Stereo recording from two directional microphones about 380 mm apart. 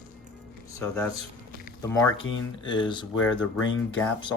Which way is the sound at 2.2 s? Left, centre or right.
Left.